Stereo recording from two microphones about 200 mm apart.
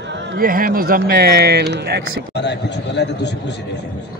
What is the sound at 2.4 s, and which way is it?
A man's voice, 60° left (ahead or behind).